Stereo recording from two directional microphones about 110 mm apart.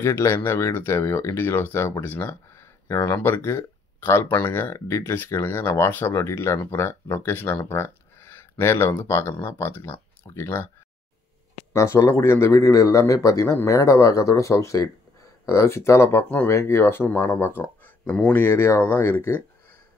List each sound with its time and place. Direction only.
0.0 s speech: 25° left (ahead or behind)
11.7 s speech: 25° left (ahead or behind)
18.4 s speech: 20° left (ahead or behind)